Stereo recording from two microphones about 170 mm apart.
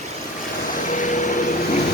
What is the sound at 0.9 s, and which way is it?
Vehicle, 50° left (ahead or behind).